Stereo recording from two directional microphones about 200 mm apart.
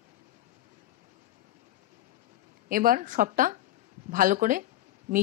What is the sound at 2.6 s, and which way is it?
Speech, 45° right (ahead or behind).